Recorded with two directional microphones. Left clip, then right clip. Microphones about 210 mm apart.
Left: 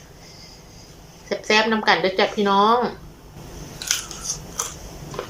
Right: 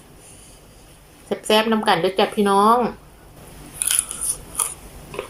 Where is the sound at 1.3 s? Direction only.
10° right (ahead or behind).